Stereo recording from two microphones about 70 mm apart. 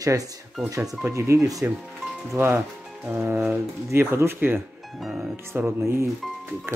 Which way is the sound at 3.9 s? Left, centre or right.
Right.